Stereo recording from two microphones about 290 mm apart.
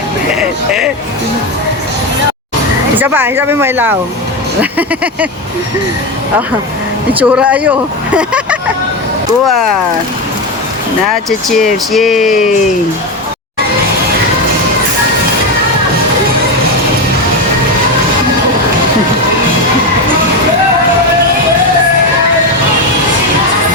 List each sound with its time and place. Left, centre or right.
0.3 s speech: centre
3.0 s speech: centre
7.2 s speech: centre
11.3 s speech: centre